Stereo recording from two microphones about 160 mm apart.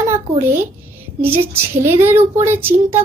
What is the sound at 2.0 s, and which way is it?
Child singing, 15° right (ahead or behind).